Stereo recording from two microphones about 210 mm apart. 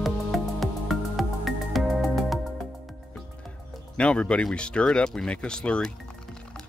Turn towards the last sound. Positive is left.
turn(degrees=5)  # may be behind; listen again after turning